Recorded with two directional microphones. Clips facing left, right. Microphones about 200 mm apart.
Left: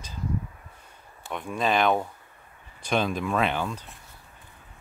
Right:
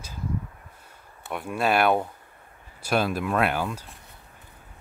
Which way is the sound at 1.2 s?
10° right (ahead or behind).